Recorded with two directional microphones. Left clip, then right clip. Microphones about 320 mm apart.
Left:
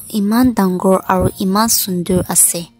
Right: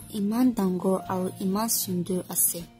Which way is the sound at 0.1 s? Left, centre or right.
Left.